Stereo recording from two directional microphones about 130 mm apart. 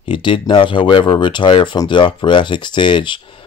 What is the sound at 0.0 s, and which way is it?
Speech, 40° left (ahead or behind).